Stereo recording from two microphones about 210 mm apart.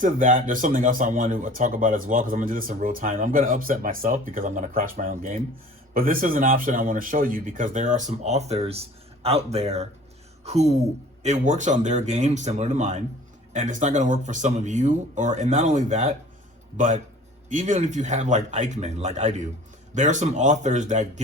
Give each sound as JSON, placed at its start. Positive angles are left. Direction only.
{"t": 0.0, "sound": "speech", "side_deg": -40}